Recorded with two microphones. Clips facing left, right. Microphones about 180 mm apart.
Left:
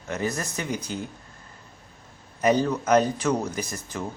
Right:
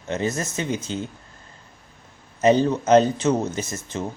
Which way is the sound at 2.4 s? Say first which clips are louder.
Right 4 dB; 25° right (ahead or behind).